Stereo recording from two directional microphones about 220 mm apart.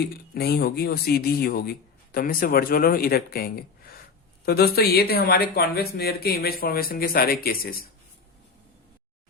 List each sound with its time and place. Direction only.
0.3 s speech: 45° left (ahead or behind)